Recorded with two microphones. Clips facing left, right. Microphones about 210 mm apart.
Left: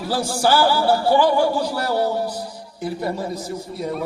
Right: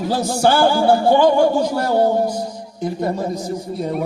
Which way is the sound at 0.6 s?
50° right (ahead or behind).